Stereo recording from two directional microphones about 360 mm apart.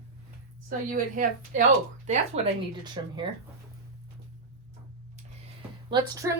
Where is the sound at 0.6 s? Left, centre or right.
Right.